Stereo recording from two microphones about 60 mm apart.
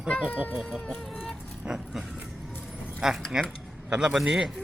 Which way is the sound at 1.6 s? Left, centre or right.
Right.